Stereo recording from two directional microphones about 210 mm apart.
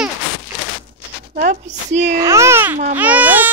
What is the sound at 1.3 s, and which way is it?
Speech, 35° right (ahead or behind).